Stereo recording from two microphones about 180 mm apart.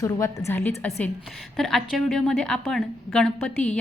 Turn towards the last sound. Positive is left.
turn(degrees=5)  # may be behind; listen again after turning